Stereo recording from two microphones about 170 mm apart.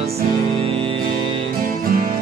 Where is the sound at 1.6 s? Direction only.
60° right (ahead or behind).